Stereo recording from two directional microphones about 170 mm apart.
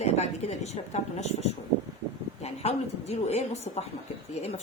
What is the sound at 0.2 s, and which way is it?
A woman's voice, 40° left (ahead or behind).